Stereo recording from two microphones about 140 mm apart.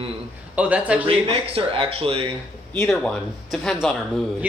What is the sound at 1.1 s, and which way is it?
Speech, 45° right (ahead or behind).